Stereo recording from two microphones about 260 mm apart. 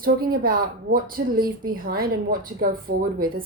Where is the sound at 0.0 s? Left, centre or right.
Right.